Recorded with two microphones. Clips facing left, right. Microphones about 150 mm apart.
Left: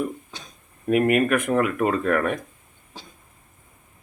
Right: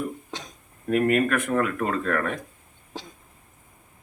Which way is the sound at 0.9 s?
10° left (ahead or behind).